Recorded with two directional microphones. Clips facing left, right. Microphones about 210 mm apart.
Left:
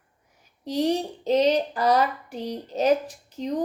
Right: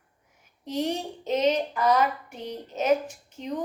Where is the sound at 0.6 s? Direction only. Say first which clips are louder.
Left 5 dB; 35° left (ahead or behind).